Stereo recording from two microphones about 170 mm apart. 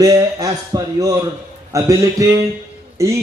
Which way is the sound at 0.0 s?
20° right (ahead or behind).